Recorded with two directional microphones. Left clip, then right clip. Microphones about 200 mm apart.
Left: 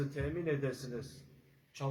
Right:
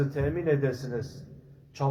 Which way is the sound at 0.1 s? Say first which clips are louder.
Right 9 dB; centre (ahead or behind).